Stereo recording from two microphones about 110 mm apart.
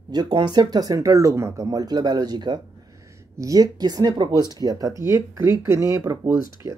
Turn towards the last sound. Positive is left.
turn(degrees=-25)  # may be behind; listen again after turning